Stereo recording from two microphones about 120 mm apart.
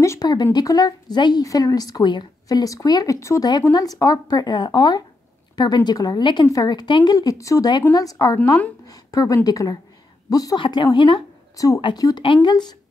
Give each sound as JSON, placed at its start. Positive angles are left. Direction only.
{"t": 0.0, "sound": "a woman's voice", "side_deg": 30}
{"t": 11.5, "sound": "speech", "side_deg": 30}